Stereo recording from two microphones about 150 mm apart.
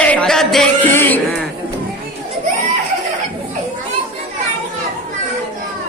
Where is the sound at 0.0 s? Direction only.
10° left (ahead or behind).